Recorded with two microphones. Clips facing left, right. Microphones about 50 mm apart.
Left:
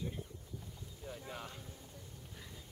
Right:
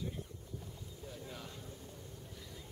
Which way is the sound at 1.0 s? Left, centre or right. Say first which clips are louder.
Left 3 dB; left.